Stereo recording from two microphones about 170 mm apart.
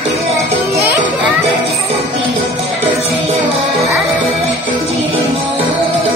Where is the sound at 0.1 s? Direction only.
35° right (ahead or behind).